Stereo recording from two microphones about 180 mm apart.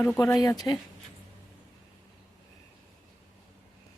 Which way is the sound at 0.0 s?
15° left (ahead or behind).